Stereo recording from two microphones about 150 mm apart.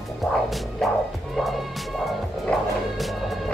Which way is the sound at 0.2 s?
Centre (ahead or behind).